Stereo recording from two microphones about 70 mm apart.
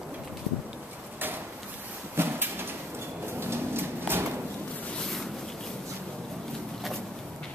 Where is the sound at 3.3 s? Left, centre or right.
Right.